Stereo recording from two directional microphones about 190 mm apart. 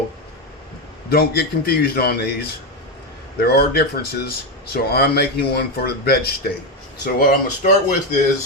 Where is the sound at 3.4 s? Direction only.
55° left (ahead or behind).